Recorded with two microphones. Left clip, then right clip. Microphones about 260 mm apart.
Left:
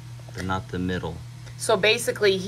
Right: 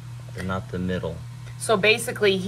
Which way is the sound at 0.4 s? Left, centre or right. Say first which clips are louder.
Left 1 dB; centre.